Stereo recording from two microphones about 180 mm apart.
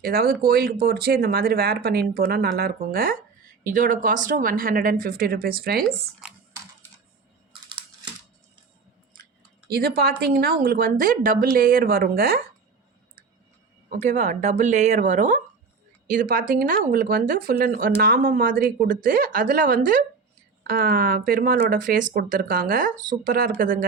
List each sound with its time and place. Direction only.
0.0 s speech: 55° right (ahead or behind)
9.6 s speech: 60° right (ahead or behind)
13.9 s speech: 40° right (ahead or behind)